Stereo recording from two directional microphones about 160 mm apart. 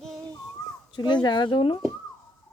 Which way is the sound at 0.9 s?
30° left (ahead or behind).